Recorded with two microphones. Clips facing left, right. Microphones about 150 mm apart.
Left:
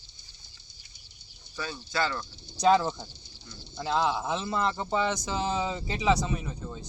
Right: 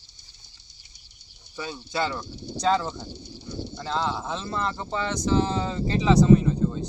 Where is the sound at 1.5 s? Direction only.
20° right (ahead or behind).